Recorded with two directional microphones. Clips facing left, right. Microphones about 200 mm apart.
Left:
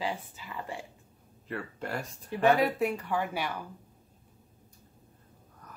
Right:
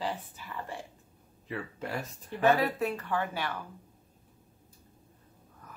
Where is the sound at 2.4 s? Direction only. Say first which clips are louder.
Left 1 dB; 15° left (ahead or behind).